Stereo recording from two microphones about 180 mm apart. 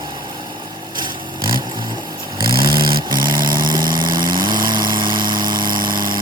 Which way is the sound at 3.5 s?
25° right (ahead or behind).